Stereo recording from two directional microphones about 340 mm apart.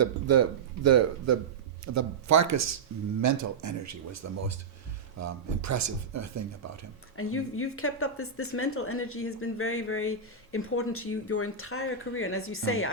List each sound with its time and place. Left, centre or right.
0.0 s a man's voice: right
7.2 s speech: left